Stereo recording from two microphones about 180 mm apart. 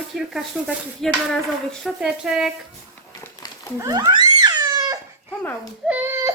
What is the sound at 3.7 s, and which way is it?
Cat, 20° right (ahead or behind).